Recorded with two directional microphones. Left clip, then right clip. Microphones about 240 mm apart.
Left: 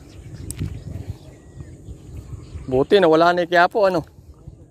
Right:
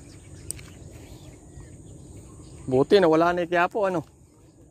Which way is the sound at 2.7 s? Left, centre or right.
Centre.